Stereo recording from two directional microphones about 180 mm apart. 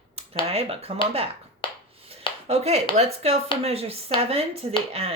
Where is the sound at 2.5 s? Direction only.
35° right (ahead or behind).